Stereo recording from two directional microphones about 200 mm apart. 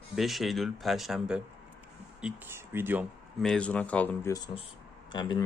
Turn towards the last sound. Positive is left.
turn(degrees=20)  # may be behind; listen again after turning